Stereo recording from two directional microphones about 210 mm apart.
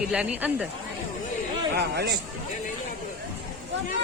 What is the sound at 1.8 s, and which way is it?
Speech, 50° right (ahead or behind).